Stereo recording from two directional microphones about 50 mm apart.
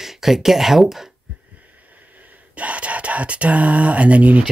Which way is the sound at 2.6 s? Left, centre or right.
Right.